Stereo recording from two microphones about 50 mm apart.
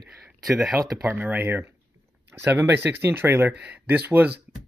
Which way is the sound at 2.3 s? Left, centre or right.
Right.